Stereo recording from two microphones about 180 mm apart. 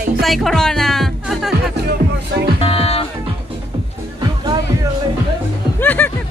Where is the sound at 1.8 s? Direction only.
60° right (ahead or behind).